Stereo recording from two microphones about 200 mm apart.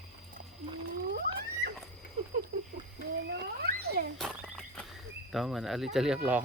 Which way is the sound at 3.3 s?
55° right (ahead or behind).